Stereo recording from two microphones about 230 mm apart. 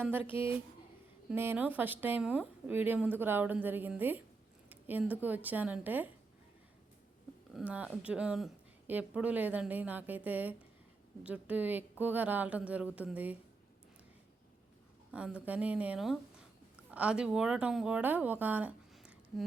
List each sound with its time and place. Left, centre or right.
0.3 s speech: left
1.3 s a woman's voice: centre
7.5 s a woman's voice: centre
15.1 s a woman's voice: centre